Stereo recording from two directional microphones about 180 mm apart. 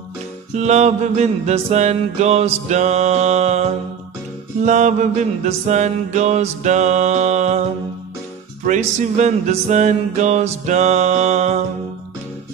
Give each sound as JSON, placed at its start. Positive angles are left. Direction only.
{"t": 0.6, "sound": "music", "side_deg": -40}
{"t": 4.6, "sound": "music", "side_deg": -40}
{"t": 8.6, "sound": "music", "side_deg": -40}